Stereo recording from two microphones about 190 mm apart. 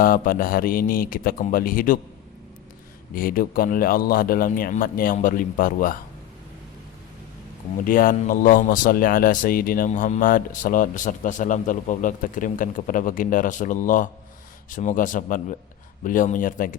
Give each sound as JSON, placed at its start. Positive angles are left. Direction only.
{"t": 0.0, "sound": "speech", "side_deg": 50}
{"t": 3.2, "sound": "speech", "side_deg": 50}
{"t": 7.9, "sound": "speech", "side_deg": 45}